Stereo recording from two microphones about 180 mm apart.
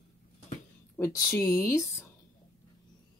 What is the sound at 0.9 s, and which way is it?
Speech, 15° left (ahead or behind).